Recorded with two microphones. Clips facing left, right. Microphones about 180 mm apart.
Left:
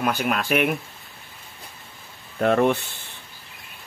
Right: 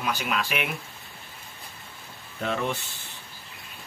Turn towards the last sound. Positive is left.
turn(degrees=60)  # may be behind; listen again after turning